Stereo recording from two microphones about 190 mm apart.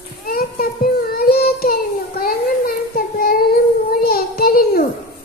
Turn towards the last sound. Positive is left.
turn(degrees=50)  # may be behind; listen again after turning